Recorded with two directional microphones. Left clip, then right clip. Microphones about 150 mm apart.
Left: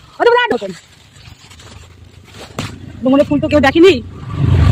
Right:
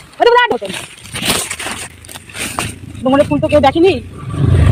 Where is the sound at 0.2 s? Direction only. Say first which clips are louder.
Right 2 dB; 20° left (ahead or behind).